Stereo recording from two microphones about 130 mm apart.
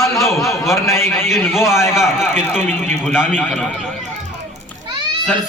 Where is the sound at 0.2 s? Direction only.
Centre (ahead or behind).